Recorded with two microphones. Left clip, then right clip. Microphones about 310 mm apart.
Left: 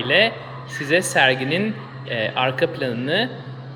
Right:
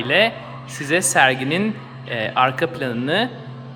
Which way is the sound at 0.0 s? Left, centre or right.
Centre.